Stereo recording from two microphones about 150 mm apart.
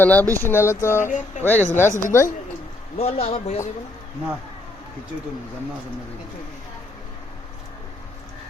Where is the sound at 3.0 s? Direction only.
40° left (ahead or behind).